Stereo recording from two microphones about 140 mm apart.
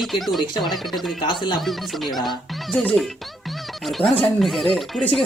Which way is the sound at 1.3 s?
35° left (ahead or behind).